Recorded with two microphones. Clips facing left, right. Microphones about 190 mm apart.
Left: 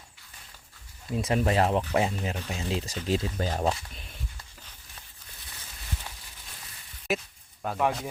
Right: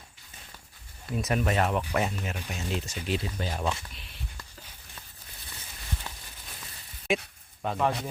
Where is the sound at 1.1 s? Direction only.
25° left (ahead or behind); by 4.2 s 45° left (ahead or behind).